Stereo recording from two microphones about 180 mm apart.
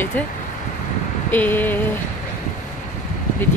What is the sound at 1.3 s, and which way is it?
Speech, 10° left (ahead or behind).